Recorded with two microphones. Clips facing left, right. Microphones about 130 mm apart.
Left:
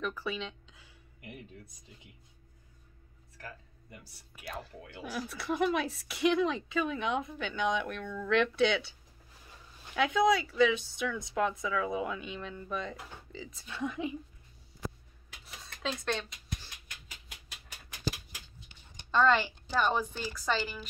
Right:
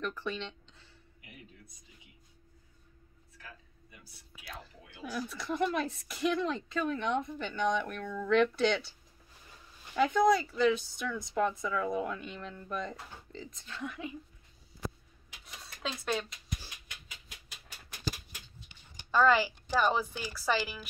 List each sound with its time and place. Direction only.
0.0 s a sound: 5° left (ahead or behind)
5.1 s speech: 5° left (ahead or behind)
9.9 s speech: centre (ahead or behind)
13.8 s speech: 20° left (ahead or behind)
15.4 s a sound: centre (ahead or behind)
19.0 s speech: 5° right (ahead or behind)